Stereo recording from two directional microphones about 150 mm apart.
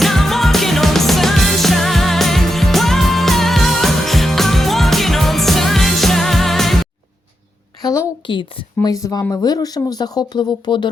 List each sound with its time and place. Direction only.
0.0 s music: centre (ahead or behind)
7.8 s a woman's voice: 25° left (ahead or behind)